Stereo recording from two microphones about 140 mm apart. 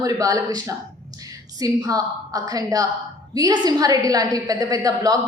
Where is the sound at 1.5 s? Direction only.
25° right (ahead or behind).